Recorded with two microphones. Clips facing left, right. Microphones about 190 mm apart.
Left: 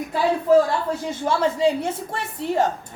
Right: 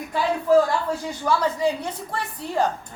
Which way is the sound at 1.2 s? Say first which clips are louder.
Left 2 dB; 25° left (ahead or behind).